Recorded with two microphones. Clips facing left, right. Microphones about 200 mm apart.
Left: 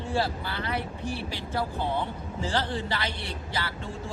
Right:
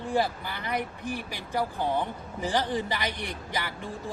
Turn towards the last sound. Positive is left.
turn(degrees=-15)  # may be behind; listen again after turning